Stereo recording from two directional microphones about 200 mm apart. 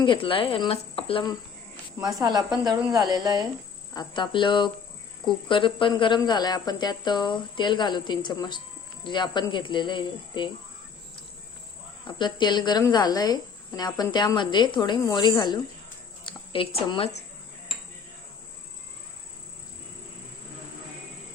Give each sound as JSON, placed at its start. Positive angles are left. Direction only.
{"t": 0.0, "sound": "speech", "side_deg": 25}
{"t": 2.2, "sound": "speech", "side_deg": -20}
{"t": 3.9, "sound": "speech", "side_deg": 25}
{"t": 12.0, "sound": "speech", "side_deg": 25}